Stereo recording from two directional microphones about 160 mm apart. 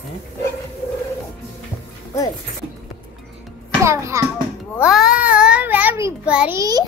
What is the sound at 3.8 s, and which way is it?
Speech, 20° right (ahead or behind).